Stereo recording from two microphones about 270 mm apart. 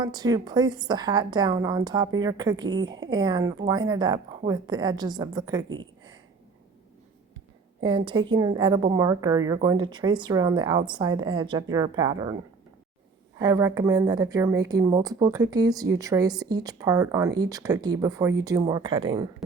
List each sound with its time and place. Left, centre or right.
0.0 s a woman's voice: centre
7.8 s a woman's voice: centre
13.4 s a woman's voice: centre